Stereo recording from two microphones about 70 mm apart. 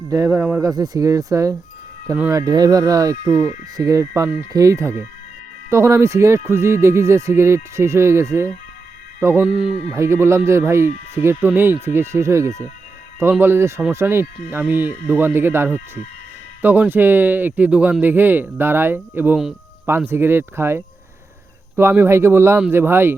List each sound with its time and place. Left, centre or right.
0.6 s speech: right
2.4 s speech: right
9.4 s speech: centre
9.9 s speech: right